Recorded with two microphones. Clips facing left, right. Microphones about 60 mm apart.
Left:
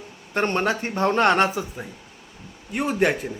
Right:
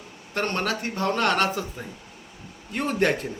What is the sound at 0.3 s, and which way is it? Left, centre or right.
A man's voice, left.